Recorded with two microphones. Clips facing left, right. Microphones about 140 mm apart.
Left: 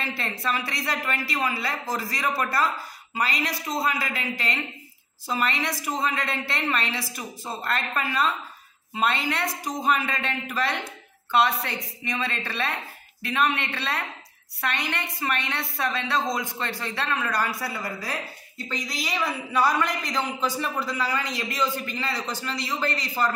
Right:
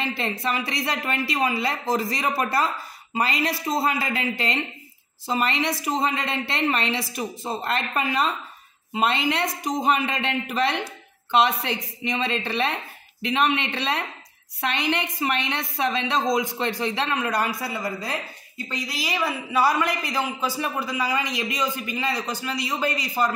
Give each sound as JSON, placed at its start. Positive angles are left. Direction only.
{"t": 0.4, "sound": "a woman's voice", "side_deg": -20}
{"t": 18.7, "sound": "a man's voice", "side_deg": -10}